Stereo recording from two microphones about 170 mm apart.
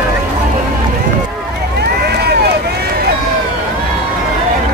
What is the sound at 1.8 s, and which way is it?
Run, 75° right (ahead or behind).